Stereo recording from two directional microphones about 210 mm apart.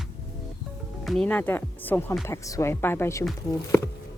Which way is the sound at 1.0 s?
5° left (ahead or behind).